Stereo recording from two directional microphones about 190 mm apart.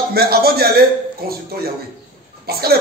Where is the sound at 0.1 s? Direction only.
55° right (ahead or behind).